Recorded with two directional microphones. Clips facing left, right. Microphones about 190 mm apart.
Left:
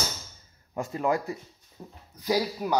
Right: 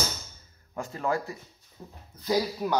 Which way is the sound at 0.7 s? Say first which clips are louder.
Left 3 dB; 20° left (ahead or behind).